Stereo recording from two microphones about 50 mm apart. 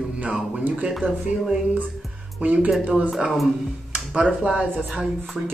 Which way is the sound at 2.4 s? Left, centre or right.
Right.